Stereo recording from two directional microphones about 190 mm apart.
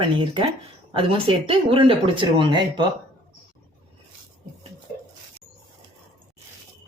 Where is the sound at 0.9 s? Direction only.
30° right (ahead or behind).